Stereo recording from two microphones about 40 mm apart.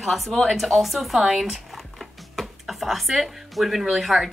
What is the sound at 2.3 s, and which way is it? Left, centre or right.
Music, centre.